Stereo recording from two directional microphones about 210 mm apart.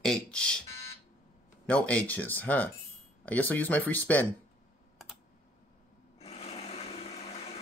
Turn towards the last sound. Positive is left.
turn(degrees=30)  # may be behind; listen again after turning